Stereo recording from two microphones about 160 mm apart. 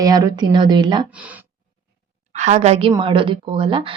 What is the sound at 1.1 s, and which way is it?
Speech, 10° right (ahead or behind).